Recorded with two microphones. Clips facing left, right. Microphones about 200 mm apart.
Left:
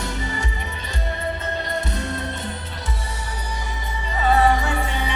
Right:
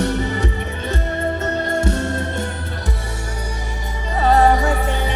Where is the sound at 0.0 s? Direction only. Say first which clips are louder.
Right 8 dB; 60° right (ahead or behind).